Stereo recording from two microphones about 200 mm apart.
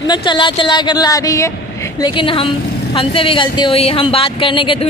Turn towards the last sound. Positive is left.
turn(degrees=25)  # may be behind; listen again after turning